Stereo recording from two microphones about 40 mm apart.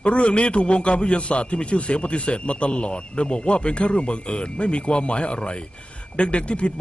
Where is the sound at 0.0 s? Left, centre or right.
Left.